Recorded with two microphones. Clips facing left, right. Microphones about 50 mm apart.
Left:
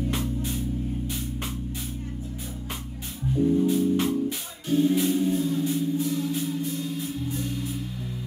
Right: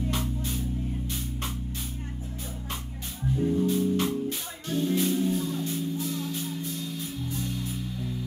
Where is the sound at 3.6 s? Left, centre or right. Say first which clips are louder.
Left 3 dB; centre.